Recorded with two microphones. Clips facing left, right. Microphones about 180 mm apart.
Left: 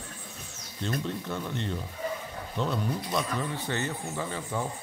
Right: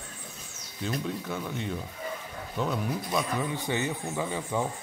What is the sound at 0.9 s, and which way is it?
Speech, 5° right (ahead or behind).